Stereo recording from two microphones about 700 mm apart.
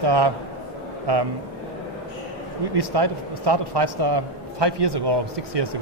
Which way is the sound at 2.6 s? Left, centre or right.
Right.